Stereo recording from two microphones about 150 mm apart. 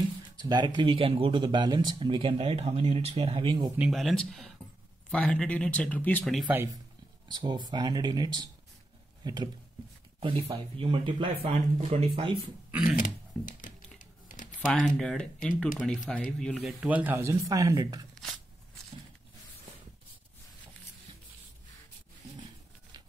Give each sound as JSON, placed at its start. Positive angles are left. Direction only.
{"t": 0.4, "sound": "speech", "side_deg": -30}
{"t": 3.7, "sound": "speech", "side_deg": -5}
{"t": 6.4, "sound": "speech", "side_deg": -15}
{"t": 7.3, "sound": "speech", "side_deg": -30}
{"t": 12.9, "sound": "computer keyboard", "side_deg": 60}
{"t": 14.6, "sound": "speech", "side_deg": 5}